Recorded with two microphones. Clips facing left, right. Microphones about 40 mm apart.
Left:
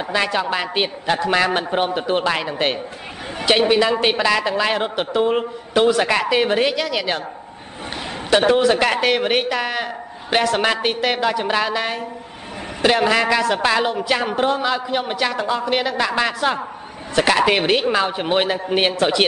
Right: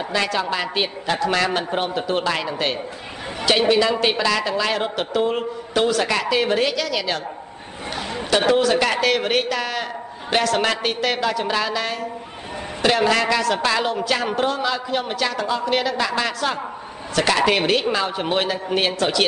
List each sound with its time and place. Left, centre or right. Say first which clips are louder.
0.1 s a man's voice: left 2 dB; centre
2.4 s a man's voice: left 2 dB; left
8.3 s a man's voice: left 3 dB; centre